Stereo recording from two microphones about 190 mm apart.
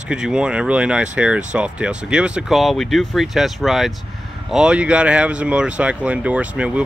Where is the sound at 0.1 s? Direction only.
5° right (ahead or behind).